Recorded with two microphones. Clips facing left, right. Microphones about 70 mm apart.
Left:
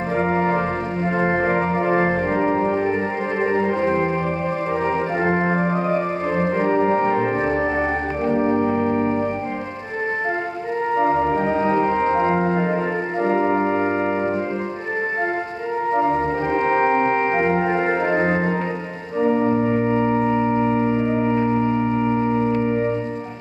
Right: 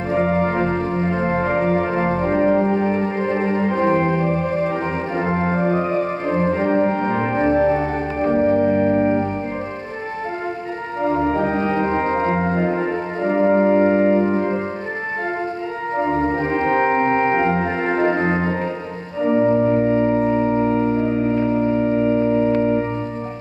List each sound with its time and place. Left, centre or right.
0.2 s organ: left
1.1 s music: left
3.8 s organ: right
5.1 s organ: left
11.0 s music: left
11.8 s music: right
12.3 s organ: centre
13.5 s music: centre
17.4 s organ: left
19.4 s organ: centre
19.7 s music: centre
20.5 s music: left